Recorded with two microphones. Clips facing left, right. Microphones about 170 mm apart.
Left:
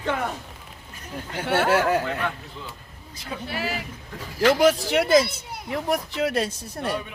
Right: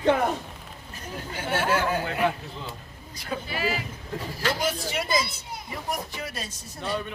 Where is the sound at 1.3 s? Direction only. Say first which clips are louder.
Left 4 dB; 65° left (ahead or behind).